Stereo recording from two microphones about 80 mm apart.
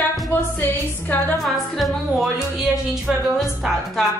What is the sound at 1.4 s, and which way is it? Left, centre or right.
A woman's voice, centre.